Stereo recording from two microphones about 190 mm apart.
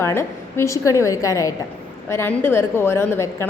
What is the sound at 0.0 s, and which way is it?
A woman's voice, 15° left (ahead or behind).